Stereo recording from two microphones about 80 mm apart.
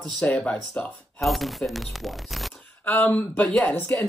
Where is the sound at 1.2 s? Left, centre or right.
Centre.